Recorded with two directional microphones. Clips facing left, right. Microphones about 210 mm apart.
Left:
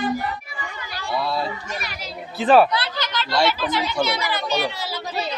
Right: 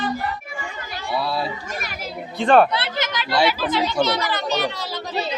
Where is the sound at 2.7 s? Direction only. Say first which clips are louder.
Right 1 dB; 25° right (ahead or behind).